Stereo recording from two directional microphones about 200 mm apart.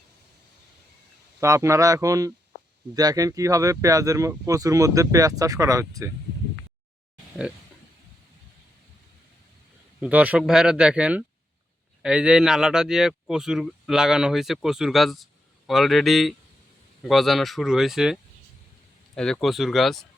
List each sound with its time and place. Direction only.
1.4 s speech: 15° right (ahead or behind)
10.0 s speech: 5° right (ahead or behind)